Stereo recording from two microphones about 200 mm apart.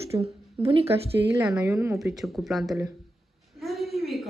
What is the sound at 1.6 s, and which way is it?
A woman's voice, 10° right (ahead or behind).